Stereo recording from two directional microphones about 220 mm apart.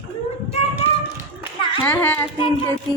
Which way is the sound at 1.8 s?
5° left (ahead or behind).